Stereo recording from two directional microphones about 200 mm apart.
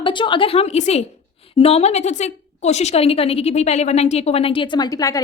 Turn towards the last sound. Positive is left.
turn(degrees=15)  # may be behind; listen again after turning